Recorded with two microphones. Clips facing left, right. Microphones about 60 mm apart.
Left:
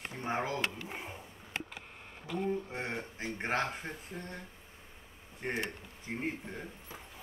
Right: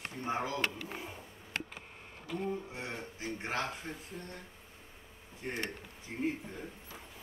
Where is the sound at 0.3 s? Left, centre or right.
Left.